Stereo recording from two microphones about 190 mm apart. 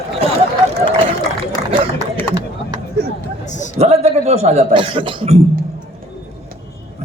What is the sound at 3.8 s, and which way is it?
A man's voice, 35° right (ahead or behind).